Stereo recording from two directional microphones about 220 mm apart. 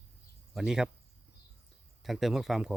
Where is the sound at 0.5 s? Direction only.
5° right (ahead or behind).